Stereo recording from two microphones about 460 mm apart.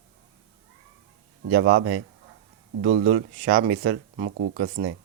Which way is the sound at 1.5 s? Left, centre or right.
Right.